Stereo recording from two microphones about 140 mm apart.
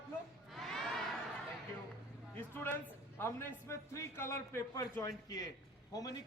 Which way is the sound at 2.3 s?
15° left (ahead or behind).